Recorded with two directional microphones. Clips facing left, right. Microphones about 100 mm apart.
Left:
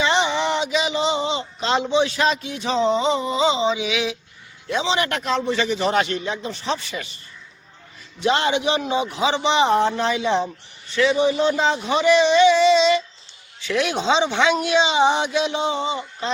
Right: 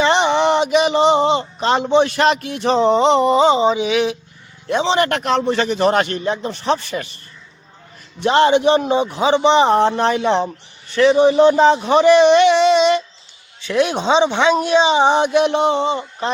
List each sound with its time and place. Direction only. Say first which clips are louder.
0.0 s a man's voice: right 5 dB; 55° right (ahead or behind)
8.2 s a man's voice: right 7 dB; 45° right (ahead or behind)
14.1 s speech: right 3 dB; 20° right (ahead or behind)
14.5 s speech: right 5 dB; 40° right (ahead or behind); by 16.3 s 60° right (ahead or behind)